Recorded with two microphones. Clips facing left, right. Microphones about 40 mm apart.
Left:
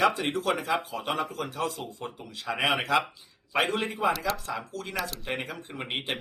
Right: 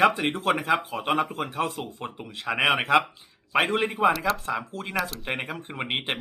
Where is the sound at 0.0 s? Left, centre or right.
Right.